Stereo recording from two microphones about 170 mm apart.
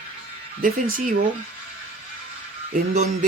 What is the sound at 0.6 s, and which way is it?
Speech, 55° right (ahead or behind).